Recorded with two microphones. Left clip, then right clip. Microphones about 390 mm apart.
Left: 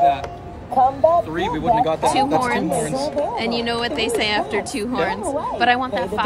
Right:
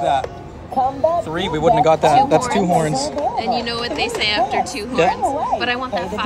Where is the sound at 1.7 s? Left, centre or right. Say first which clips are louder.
Right 4 dB; centre.